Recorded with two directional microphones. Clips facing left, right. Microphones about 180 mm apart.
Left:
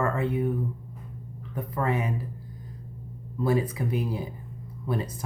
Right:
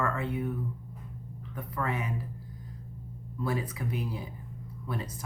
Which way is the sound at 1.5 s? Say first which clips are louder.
Left 6 dB; 30° left (ahead or behind).